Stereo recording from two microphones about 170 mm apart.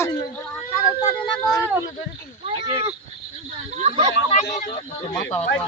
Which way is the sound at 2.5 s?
25° right (ahead or behind).